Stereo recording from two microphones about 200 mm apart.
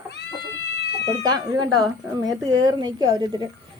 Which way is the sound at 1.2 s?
20° right (ahead or behind).